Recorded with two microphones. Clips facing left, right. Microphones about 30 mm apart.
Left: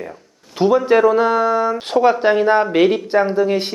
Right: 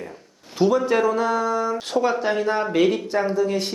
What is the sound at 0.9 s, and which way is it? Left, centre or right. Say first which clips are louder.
Speech: left 7 dB; left.